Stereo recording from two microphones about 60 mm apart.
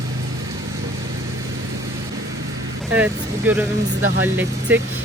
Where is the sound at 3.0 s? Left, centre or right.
Right.